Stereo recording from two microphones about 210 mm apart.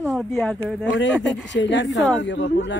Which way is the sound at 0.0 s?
Centre (ahead or behind).